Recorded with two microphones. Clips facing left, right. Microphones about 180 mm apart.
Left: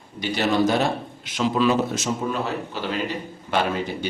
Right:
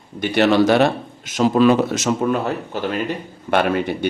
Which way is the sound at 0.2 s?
60° right (ahead or behind).